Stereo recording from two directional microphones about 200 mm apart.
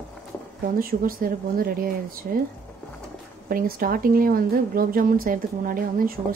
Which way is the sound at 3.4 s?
45° right (ahead or behind).